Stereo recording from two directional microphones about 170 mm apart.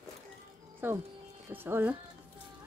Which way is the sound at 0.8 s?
10° right (ahead or behind).